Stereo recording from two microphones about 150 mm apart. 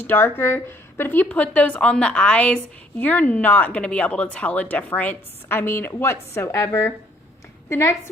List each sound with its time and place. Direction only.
0.0 s speech: 15° left (ahead or behind)